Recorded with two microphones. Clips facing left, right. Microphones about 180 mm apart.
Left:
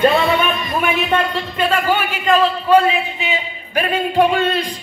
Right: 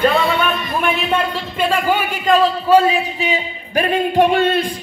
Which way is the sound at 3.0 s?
40° right (ahead or behind).